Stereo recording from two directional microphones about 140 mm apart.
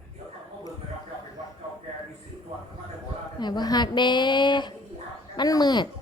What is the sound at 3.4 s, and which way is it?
Speech, 30° left (ahead or behind).